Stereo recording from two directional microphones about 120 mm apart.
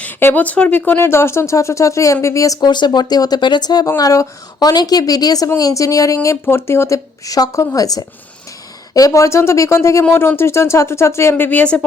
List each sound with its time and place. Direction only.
0.0 s speech: 15° left (ahead or behind)